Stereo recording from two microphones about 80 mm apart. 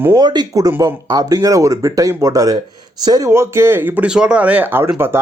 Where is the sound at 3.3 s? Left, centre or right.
Right.